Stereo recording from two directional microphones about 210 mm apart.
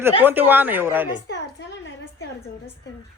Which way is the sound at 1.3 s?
55° left (ahead or behind).